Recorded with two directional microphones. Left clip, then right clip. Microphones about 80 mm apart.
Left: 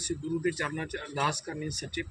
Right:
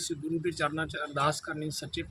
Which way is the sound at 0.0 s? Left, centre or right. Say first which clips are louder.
Left 1 dB; right.